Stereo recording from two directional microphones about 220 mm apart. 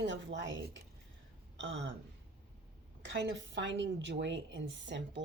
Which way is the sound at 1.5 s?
55° right (ahead or behind).